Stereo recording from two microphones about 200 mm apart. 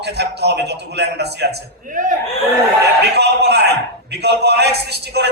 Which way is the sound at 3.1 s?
55° right (ahead or behind).